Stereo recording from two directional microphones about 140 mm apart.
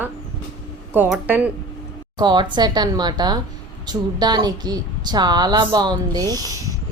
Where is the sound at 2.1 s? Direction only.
30° right (ahead or behind).